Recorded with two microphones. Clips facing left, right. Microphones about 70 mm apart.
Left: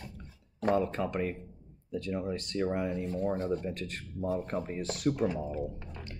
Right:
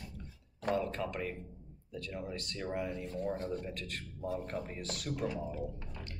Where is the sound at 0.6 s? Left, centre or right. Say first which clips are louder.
Left 5 dB; left.